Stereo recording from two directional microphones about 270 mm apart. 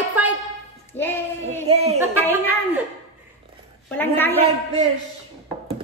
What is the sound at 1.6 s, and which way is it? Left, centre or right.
Speech, right.